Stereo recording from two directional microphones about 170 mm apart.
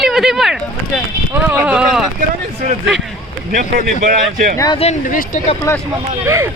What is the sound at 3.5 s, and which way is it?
Speech, 50° right (ahead or behind).